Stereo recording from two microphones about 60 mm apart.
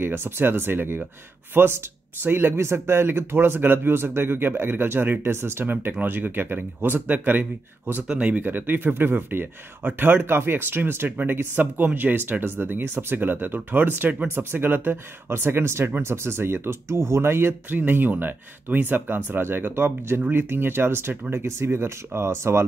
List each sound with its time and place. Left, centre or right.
0.0 s speech: right
8.1 s speech: right